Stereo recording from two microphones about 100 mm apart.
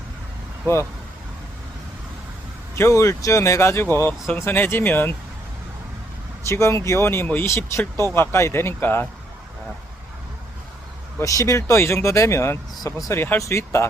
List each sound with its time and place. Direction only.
2.7 s speech: 30° left (ahead or behind)
6.5 s speech: 30° left (ahead or behind)
11.2 s speech: 35° left (ahead or behind)
13.1 s speech: 20° left (ahead or behind)